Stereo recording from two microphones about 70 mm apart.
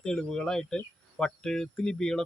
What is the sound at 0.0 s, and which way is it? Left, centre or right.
Speech, centre.